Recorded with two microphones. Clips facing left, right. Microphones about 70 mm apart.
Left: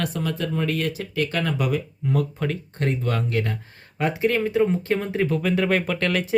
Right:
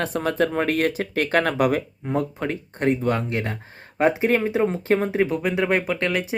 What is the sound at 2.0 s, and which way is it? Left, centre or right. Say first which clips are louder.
Speech: even; right.